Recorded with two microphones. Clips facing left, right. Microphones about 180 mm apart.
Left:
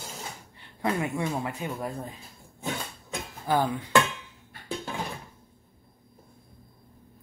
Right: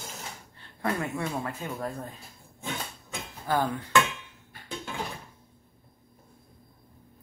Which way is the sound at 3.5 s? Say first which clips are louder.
Left 2 dB; 15° left (ahead or behind).